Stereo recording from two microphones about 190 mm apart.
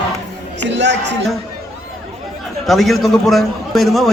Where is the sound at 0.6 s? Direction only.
70° right (ahead or behind).